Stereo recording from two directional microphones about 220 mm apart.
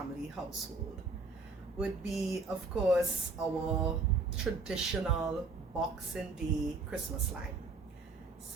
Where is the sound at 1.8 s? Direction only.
Centre (ahead or behind).